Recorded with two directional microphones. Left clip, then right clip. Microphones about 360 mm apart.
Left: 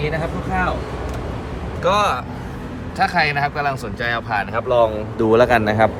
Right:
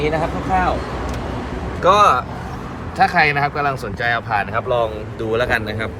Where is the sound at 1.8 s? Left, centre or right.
Centre.